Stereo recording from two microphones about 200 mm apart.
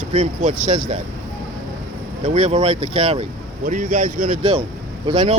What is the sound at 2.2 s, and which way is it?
Speech, 30° right (ahead or behind).